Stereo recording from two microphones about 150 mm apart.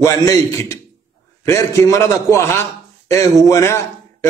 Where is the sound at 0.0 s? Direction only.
20° left (ahead or behind).